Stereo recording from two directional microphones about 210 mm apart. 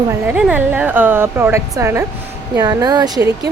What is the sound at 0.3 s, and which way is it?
Speech, 5° right (ahead or behind).